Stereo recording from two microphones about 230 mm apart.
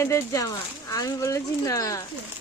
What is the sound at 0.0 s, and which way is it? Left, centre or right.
Speech, centre.